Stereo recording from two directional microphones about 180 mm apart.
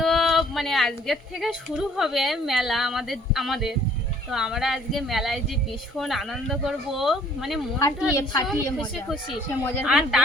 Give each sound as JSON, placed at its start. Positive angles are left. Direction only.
{"t": 0.0, "sound": "speech", "side_deg": 0}
{"t": 8.1, "sound": "a woman's voice", "side_deg": 20}
{"t": 9.8, "sound": "speech", "side_deg": -5}